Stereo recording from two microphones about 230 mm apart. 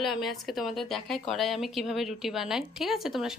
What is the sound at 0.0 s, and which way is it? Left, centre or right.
Speech, centre.